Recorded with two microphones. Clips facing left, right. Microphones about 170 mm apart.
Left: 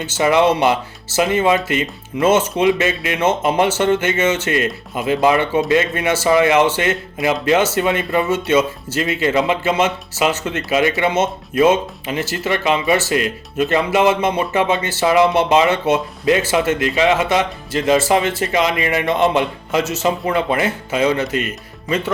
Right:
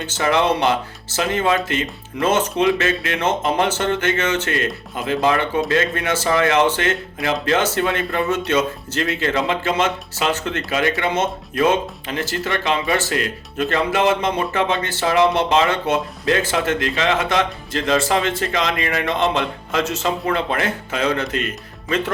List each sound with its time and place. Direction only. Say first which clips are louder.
0.1 s speech: left 4 dB; 10° left (ahead or behind)
10.9 s speech: left 3 dB; 20° left (ahead or behind)
12.5 s speech: left 5 dB; 10° left (ahead or behind)